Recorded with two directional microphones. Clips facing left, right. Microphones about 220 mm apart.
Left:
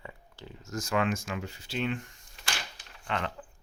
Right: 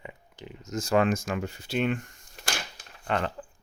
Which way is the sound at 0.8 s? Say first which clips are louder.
Right 6 dB; 40° right (ahead or behind).